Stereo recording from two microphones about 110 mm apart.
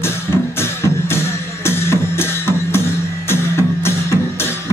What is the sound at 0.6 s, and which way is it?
Music, 20° left (ahead or behind).